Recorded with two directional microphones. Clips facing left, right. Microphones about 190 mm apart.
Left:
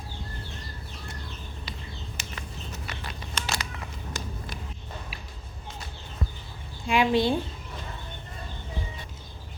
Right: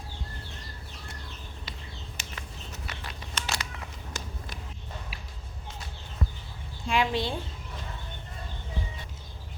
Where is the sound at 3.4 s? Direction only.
55° left (ahead or behind).